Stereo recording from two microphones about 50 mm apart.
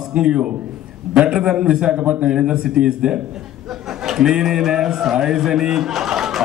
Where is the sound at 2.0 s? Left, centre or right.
Right.